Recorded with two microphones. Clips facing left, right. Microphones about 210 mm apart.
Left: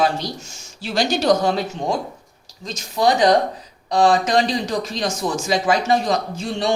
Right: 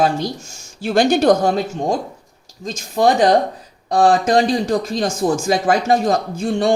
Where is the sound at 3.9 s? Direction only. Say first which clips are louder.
Right 2 dB; 50° right (ahead or behind).